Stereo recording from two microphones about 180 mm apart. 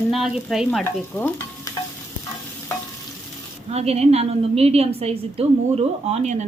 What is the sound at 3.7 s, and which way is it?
A woman's voice, 35° right (ahead or behind).